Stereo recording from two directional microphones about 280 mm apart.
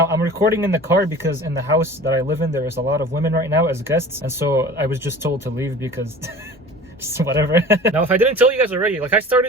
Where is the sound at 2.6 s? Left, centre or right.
Right.